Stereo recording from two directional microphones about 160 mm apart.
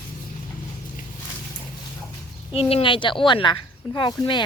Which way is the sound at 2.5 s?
35° left (ahead or behind).